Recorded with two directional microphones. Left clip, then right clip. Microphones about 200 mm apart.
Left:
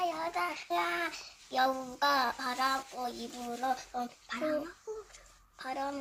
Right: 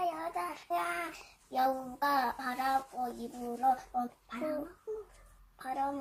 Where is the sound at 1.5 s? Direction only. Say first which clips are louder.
Left 1 dB; 20° left (ahead or behind).